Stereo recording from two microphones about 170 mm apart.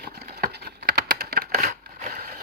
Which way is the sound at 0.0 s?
65° right (ahead or behind).